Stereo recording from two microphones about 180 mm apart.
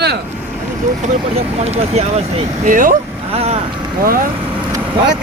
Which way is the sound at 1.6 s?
35° right (ahead or behind).